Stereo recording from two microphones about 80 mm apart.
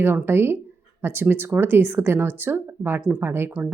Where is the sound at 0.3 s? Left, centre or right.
Right.